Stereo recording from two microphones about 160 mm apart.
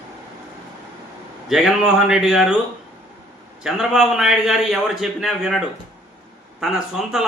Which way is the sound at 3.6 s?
Centre (ahead or behind).